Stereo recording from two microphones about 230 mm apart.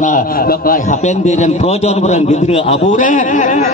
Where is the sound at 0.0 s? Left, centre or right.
Left.